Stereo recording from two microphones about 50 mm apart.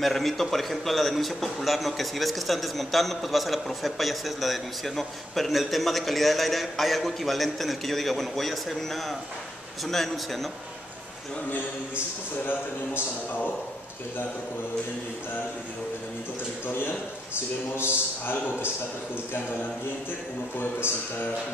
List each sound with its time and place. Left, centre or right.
0.0 s a man's voice: centre
16.6 s a man's voice: left